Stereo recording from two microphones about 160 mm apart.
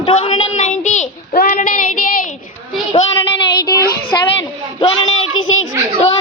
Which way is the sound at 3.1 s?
20° left (ahead or behind).